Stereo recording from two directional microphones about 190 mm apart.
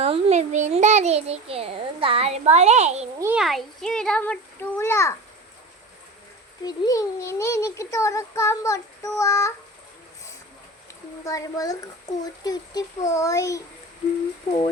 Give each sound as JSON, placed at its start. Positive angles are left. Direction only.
{"t": 0.0, "sound": "a sound", "side_deg": -35}
{"t": 3.2, "sound": "a child's voice", "side_deg": -10}
{"t": 3.4, "sound": "a child's voice", "side_deg": 0}
{"t": 6.7, "sound": "a child's voice", "side_deg": 20}
{"t": 11.3, "sound": "a child's voice", "side_deg": 15}